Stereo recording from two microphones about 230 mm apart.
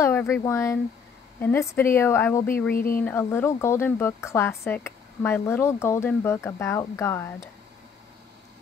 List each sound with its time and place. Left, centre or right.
0.0 s speech: centre
2.7 s speech: left
3.0 s speech: centre